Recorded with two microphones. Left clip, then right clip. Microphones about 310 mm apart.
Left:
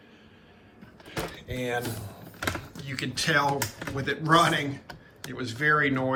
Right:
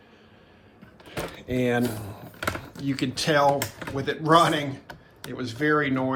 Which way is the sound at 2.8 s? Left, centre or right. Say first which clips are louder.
Right 3 dB; centre.